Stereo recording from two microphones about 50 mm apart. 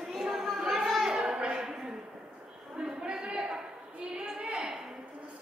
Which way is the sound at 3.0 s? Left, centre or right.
Centre.